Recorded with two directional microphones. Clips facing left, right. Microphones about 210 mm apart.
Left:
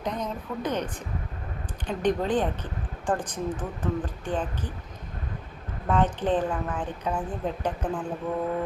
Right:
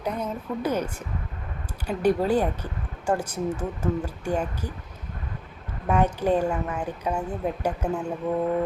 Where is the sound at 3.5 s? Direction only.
25° right (ahead or behind).